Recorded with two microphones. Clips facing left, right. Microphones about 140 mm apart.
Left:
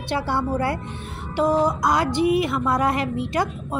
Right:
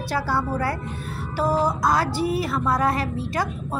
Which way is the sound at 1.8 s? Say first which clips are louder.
Left 2 dB; 20° left (ahead or behind).